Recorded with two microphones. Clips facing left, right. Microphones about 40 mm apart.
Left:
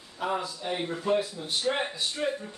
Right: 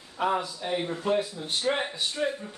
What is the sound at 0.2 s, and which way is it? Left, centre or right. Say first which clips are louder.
Speech: right 4 dB; right.